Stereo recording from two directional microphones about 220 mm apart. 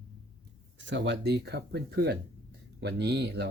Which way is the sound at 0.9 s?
50° right (ahead or behind).